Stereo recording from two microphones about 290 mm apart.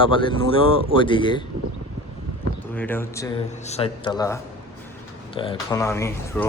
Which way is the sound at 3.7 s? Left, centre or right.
Centre.